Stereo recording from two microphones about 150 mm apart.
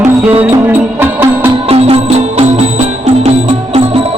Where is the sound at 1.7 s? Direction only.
40° right (ahead or behind).